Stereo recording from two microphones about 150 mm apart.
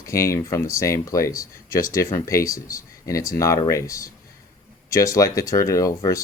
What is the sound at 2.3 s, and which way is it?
Speech, 20° left (ahead or behind).